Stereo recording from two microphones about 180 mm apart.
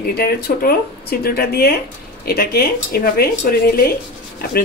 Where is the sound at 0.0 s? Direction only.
55° left (ahead or behind).